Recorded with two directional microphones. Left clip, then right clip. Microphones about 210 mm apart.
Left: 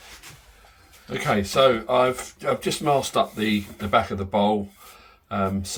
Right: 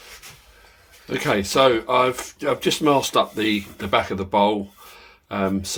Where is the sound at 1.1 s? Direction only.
55° right (ahead or behind).